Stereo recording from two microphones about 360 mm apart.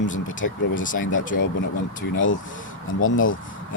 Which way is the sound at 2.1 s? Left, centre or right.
Left.